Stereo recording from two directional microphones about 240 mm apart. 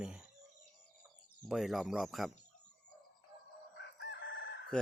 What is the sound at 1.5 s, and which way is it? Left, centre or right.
Speech, centre.